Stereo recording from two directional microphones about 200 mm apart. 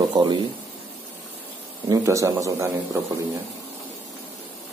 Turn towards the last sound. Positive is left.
turn(degrees=-15)  # may be behind; listen again after turning